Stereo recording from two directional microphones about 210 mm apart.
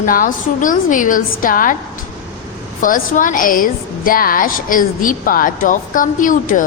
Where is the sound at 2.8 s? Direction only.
40° left (ahead or behind).